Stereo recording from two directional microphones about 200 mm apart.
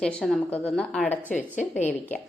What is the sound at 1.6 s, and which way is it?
Speech, 35° left (ahead or behind).